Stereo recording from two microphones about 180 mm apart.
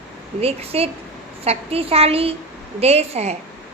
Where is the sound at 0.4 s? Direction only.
35° right (ahead or behind).